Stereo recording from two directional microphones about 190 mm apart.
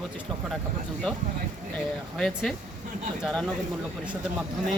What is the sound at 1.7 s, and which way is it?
Speech, 5° left (ahead or behind).